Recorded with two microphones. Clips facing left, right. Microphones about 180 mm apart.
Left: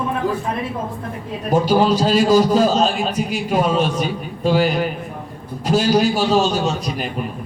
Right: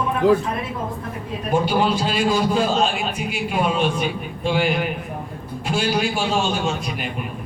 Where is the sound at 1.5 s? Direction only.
40° left (ahead or behind).